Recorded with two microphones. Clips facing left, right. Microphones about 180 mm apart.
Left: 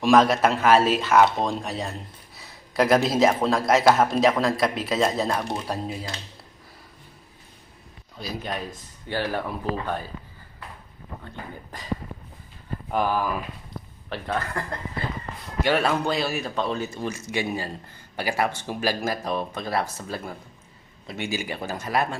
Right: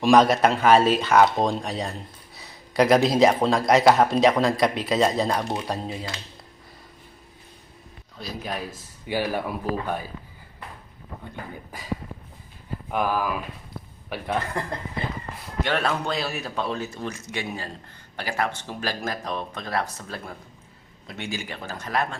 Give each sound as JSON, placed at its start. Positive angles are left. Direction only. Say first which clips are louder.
{"t": 0.0, "sound": "speech", "louder": "right 1 dB", "side_deg": 0}
{"t": 8.2, "sound": "speech", "louder": "left 1 dB", "side_deg": 0}
{"t": 11.7, "sound": "speech", "louder": "even", "side_deg": -10}
{"t": 12.9, "sound": "speech", "louder": "left 1 dB", "side_deg": -5}
{"t": 14.1, "sound": "speech", "louder": "right 1 dB", "side_deg": -15}
{"t": 15.6, "sound": "speech", "louder": "left 3 dB", "side_deg": 5}